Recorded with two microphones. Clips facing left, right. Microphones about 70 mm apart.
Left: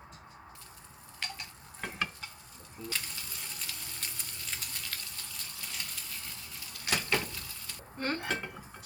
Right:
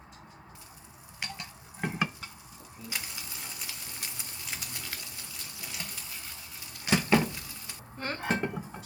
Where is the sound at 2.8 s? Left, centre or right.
Centre.